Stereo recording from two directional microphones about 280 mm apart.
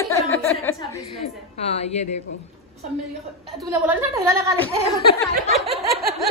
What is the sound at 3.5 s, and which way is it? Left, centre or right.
A woman's voice, centre.